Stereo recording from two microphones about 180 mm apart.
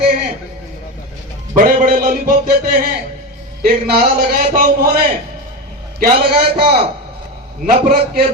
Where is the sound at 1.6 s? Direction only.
50° right (ahead or behind).